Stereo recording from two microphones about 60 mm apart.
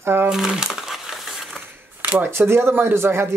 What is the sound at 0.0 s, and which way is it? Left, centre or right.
Speech, right.